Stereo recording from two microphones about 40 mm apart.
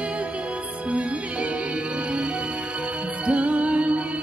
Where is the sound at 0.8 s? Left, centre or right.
Right.